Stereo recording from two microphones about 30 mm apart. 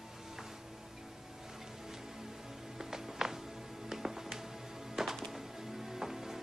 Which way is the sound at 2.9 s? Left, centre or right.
Centre.